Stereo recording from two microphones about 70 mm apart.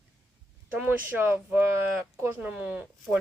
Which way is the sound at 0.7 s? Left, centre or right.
Right.